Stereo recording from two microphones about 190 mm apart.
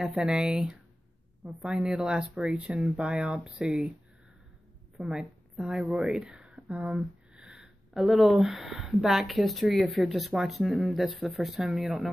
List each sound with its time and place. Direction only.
0.0 s speech: 5° right (ahead or behind)
4.9 s a woman's voice: centre (ahead or behind)